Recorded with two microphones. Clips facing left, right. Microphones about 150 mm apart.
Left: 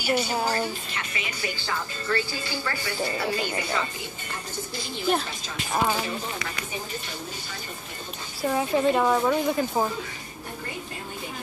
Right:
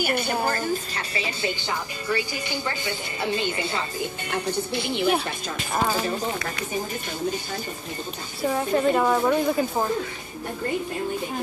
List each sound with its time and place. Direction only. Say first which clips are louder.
0.0 s speech: right 1 dB; 55° right (ahead or behind)
0.5 s a woman's voice: right 2 dB; 40° right (ahead or behind)
1.6 s speech: right 1 dB; 15° right (ahead or behind)
4.3 s speech: right 9 dB; 65° right (ahead or behind)
8.4 s a woman's voice: right 1 dB; centre (ahead or behind)